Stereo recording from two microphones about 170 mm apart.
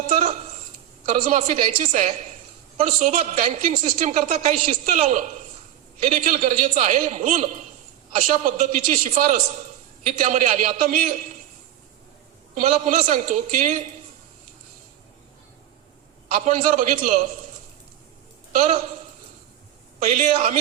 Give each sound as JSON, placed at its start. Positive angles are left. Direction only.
{"t": 0.1, "sound": "a sound", "side_deg": -45}
{"t": 1.0, "sound": "a woman's voice", "side_deg": -45}
{"t": 12.5, "sound": "a woman's voice", "side_deg": -45}
{"t": 16.3, "sound": "a woman's voice", "side_deg": -50}
{"t": 18.5, "sound": "a woman's voice", "side_deg": -40}
{"t": 20.0, "sound": "a woman's voice", "side_deg": -45}